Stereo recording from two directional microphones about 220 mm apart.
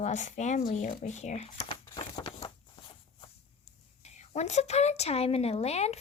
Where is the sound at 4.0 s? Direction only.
30° left (ahead or behind).